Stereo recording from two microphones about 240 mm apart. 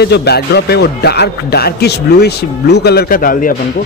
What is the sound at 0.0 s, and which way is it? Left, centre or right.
A man's voice, left.